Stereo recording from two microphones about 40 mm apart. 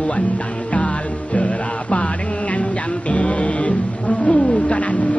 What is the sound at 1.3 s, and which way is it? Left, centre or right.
Music, left.